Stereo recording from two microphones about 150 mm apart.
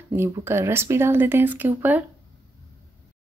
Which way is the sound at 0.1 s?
15° right (ahead or behind).